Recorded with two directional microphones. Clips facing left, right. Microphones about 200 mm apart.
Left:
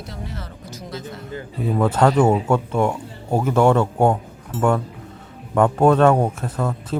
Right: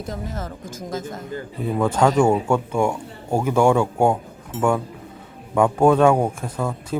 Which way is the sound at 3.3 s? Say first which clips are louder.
Left 1 dB; 10° right (ahead or behind).